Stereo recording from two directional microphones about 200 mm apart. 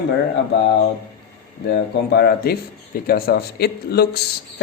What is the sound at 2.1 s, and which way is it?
Speech, 50° left (ahead or behind).